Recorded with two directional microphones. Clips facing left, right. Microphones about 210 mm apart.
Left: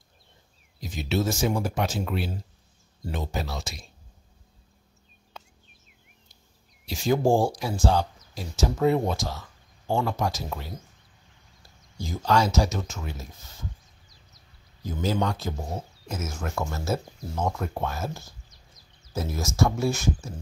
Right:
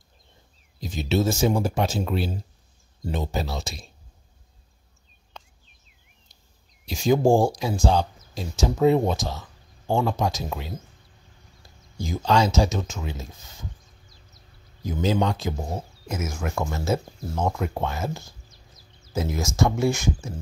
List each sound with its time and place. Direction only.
0.7 s speech: 25° right (ahead or behind)
5.4 s a sound: 5° left (ahead or behind)
6.9 s speech: 15° right (ahead or behind)
12.2 s speech: 20° right (ahead or behind)
18.5 s music: 25° right (ahead or behind)
19.1 s speech: 15° right (ahead or behind)